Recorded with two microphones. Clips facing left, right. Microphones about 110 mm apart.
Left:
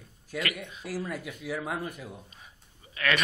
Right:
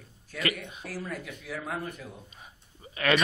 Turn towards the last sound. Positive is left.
turn(degrees=-25)  # may be behind; listen again after turning